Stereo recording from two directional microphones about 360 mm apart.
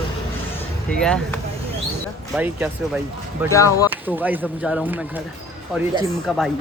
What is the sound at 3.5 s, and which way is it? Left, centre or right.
Speech, centre.